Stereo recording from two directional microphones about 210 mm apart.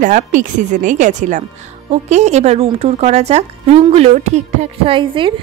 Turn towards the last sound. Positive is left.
turn(degrees=-25)  # may be behind; listen again after turning